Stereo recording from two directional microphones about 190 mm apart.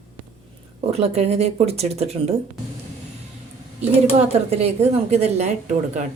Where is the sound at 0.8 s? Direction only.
35° right (ahead or behind).